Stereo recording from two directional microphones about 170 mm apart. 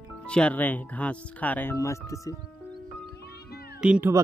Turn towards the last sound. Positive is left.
turn(degrees=-10)  # may be behind; listen again after turning